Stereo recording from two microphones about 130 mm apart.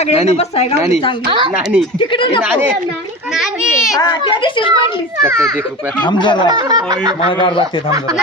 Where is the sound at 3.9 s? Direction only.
35° left (ahead or behind).